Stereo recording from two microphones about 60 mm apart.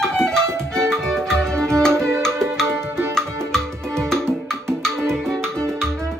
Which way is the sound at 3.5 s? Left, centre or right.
Centre.